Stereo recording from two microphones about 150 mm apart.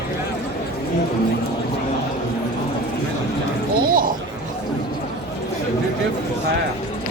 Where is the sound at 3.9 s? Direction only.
70° right (ahead or behind).